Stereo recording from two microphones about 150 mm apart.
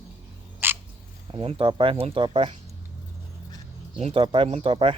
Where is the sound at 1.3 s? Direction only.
35° right (ahead or behind).